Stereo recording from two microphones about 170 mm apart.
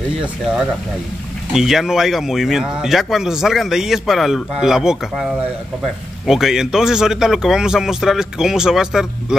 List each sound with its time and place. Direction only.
1.5 s speech: 5° right (ahead or behind)